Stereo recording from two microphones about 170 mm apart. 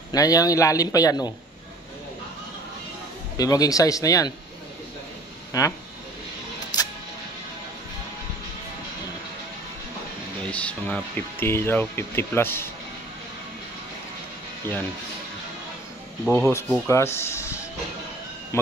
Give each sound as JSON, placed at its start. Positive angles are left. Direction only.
{"t": 0.1, "sound": "a man's voice", "side_deg": 20}
{"t": 3.3, "sound": "a man's voice", "side_deg": 20}
{"t": 5.5, "sound": "a man's voice", "side_deg": 20}
{"t": 6.7, "sound": "music", "side_deg": 25}
{"t": 10.4, "sound": "speech", "side_deg": 5}
{"t": 16.3, "sound": "speech", "side_deg": 10}
{"t": 18.5, "sound": "speech", "side_deg": 15}